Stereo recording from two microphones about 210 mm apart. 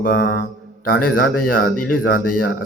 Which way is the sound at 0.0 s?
45° left (ahead or behind).